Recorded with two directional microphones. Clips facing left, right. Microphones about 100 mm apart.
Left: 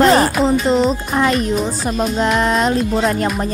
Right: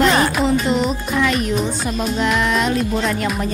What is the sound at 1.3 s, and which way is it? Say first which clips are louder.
Speech: left 2 dB; centre (ahead or behind).